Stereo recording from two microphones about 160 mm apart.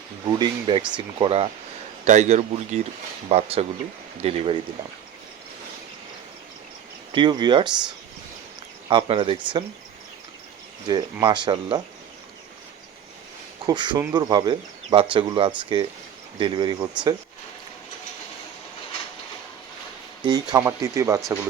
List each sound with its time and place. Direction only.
0.3 s speech: 30° right (ahead or behind)
2.0 s speech: 45° right (ahead or behind)
7.1 s speech: 30° right (ahead or behind)
10.8 s speech: 25° right (ahead or behind)
13.7 s speech: 30° right (ahead or behind)
20.2 s speech: 25° right (ahead or behind)